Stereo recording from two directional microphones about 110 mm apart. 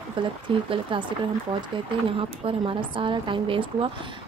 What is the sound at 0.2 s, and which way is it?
Speech, 50° right (ahead or behind).